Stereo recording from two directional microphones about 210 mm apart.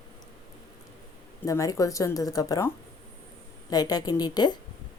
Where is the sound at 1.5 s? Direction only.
15° left (ahead or behind).